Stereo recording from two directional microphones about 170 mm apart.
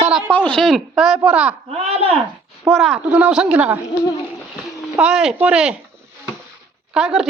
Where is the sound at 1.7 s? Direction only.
40° right (ahead or behind).